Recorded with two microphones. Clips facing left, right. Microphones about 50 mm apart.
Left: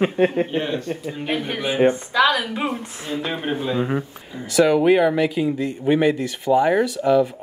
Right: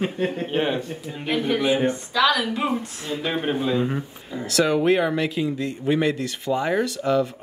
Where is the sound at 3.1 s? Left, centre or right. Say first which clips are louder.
Even; centre.